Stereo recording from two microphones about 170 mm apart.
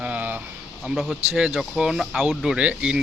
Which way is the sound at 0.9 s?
5° right (ahead or behind).